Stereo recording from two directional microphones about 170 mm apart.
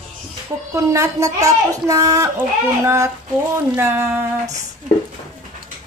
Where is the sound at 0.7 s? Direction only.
15° right (ahead or behind).